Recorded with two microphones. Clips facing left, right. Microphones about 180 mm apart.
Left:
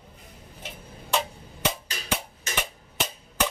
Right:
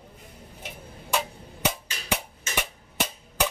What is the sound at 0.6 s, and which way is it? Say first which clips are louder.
Tick-tock: even; 10° right (ahead or behind).